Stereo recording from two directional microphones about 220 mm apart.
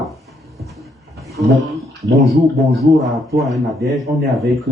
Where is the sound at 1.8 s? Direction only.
Centre (ahead or behind).